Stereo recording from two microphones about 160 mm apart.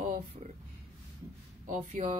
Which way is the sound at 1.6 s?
50° right (ahead or behind).